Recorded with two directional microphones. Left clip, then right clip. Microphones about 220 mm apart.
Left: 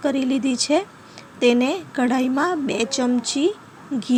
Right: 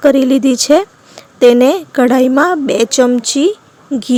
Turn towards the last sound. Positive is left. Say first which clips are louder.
# right 8 dB
turn(degrees=-40)  # may be behind; listen again after turning